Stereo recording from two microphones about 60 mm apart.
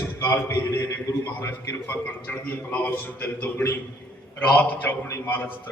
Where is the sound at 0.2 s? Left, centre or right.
Left.